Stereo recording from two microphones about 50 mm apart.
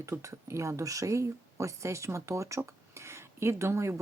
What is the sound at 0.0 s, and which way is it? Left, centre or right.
Speech, right.